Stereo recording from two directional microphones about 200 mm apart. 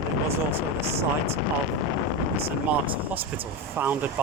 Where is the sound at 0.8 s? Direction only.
30° right (ahead or behind).